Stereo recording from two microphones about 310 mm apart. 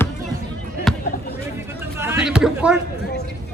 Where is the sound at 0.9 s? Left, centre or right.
Centre.